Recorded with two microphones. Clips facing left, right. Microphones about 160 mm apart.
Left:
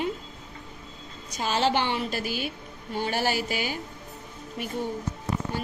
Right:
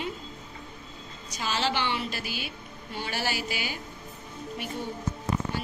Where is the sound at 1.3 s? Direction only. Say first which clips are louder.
Left 5 dB; 50° left (ahead or behind).